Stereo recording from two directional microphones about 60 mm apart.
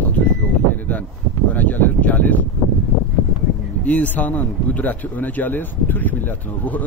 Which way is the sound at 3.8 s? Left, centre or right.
Left.